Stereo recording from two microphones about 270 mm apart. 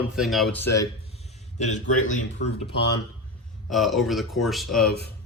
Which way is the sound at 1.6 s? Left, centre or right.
Left.